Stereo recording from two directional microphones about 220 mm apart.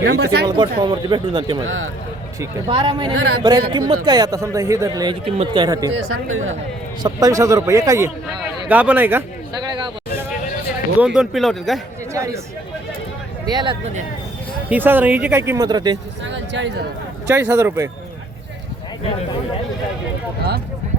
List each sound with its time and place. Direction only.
0.0 s speech: 50° right (ahead or behind)
0.4 s speech: 20° right (ahead or behind)
1.6 s speech: 65° right (ahead or behind)
2.4 s speech: 20° right (ahead or behind)
6.2 s speech: 65° right (ahead or behind)
7.0 s speech: 15° right (ahead or behind)
9.7 s a sound: 20° right (ahead or behind)
11.0 s speech: 5° right (ahead or behind)
12.1 s speech: 15° right (ahead or behind)
13.5 s speech: 20° right (ahead or behind)
14.7 s speech: 10° right (ahead or behind)
16.2 s speech: 55° right (ahead or behind)
17.2 s speech: 10° right (ahead or behind)